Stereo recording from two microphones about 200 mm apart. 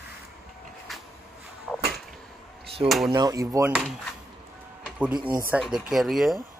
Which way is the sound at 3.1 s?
20° right (ahead or behind).